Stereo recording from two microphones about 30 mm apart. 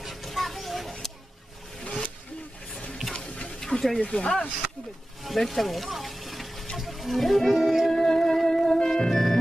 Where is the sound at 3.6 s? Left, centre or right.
Centre.